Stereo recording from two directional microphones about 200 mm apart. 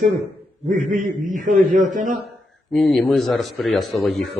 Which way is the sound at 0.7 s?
40° right (ahead or behind).